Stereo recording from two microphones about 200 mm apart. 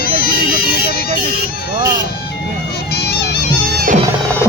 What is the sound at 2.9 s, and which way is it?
Bagpipes, 55° left (ahead or behind).